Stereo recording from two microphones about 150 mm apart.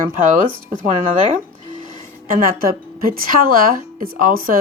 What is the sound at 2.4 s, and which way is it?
A woman's voice, 70° right (ahead or behind).